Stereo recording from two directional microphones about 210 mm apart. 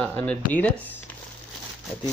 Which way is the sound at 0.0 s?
5° left (ahead or behind).